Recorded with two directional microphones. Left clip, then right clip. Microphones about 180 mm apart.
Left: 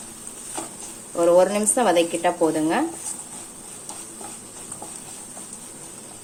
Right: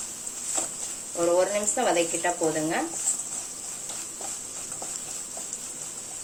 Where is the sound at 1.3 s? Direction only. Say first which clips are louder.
Left 6 dB; 45° left (ahead or behind).